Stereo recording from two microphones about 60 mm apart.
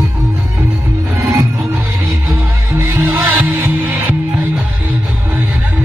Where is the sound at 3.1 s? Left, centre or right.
Right.